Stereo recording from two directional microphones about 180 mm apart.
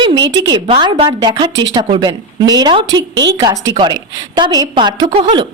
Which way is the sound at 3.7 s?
25° right (ahead or behind).